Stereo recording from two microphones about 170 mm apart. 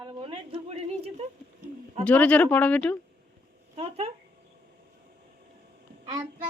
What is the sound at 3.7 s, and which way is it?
Speech, 35° right (ahead or behind).